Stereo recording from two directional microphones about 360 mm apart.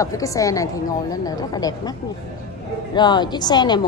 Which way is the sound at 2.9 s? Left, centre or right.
Centre.